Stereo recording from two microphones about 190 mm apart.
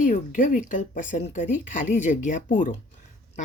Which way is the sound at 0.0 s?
40° left (ahead or behind).